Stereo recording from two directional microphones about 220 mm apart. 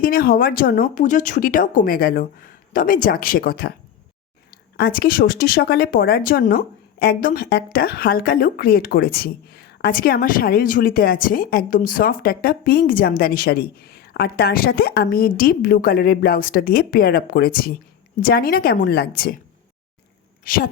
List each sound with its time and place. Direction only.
0.0 s speech: 40° left (ahead or behind)
4.8 s speech: 40° left (ahead or behind)
20.4 s speech: 40° left (ahead or behind)